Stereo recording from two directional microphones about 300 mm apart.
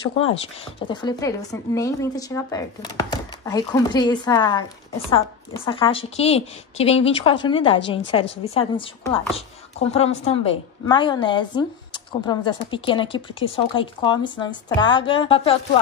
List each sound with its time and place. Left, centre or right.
0.8 s a woman's voice: centre